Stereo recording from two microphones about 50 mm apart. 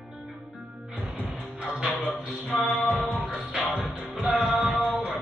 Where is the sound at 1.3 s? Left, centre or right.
Centre.